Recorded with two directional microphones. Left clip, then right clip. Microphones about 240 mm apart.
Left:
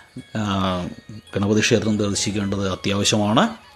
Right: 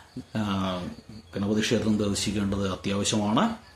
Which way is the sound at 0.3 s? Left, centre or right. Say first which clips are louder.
Left 7 dB; left.